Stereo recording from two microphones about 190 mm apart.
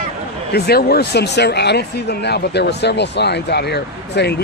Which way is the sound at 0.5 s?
55° left (ahead or behind).